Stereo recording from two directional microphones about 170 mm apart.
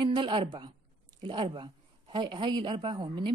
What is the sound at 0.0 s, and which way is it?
A woman's voice, 30° right (ahead or behind).